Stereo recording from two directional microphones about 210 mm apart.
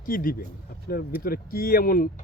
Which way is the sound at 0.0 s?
45° left (ahead or behind).